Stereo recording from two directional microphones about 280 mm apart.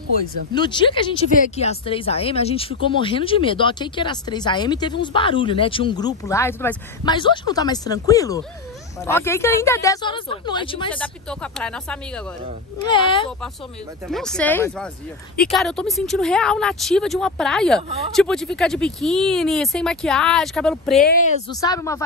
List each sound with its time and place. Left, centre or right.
0.5 s speech: centre
10.9 s speech: centre
12.8 s speech: centre
14.0 s speech: centre
21.0 s speech: left
21.5 s speech: centre